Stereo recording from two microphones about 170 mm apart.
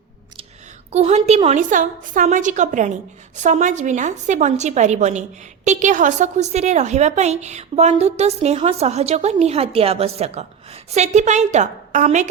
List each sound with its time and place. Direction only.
0.9 s a woman's voice: 40° right (ahead or behind)